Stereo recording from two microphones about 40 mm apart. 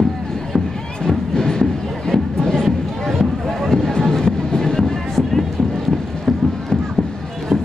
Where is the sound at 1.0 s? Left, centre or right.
Centre.